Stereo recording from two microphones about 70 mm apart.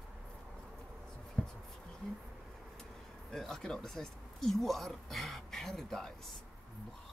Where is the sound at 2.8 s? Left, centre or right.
Centre.